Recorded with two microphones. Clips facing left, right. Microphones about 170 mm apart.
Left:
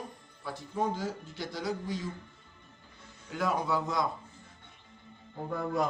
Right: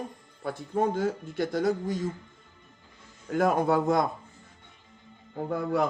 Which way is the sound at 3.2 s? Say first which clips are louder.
Right 7 dB; 50° right (ahead or behind).